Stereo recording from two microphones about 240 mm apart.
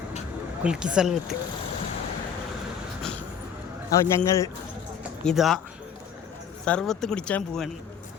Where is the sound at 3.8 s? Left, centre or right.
Centre.